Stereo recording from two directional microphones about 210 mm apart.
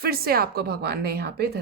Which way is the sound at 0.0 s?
45° right (ahead or behind).